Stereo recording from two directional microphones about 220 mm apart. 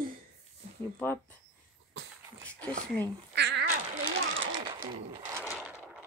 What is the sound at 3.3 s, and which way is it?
Cat, 50° right (ahead or behind).